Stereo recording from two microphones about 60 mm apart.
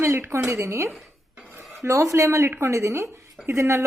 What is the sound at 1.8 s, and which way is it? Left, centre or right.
Speech, right.